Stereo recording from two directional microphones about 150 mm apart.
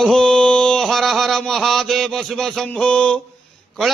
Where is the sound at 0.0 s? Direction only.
5° left (ahead or behind).